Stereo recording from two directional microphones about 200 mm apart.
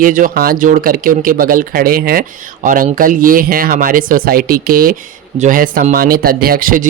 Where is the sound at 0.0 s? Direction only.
40° right (ahead or behind).